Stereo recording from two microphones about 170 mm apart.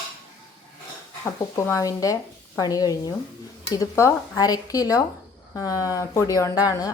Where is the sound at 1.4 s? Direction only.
20° left (ahead or behind).